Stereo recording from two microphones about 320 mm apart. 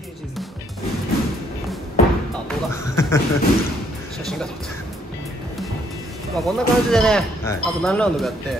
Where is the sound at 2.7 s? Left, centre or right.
Centre.